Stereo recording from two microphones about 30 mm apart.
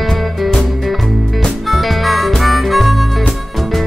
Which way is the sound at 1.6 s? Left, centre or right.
Centre.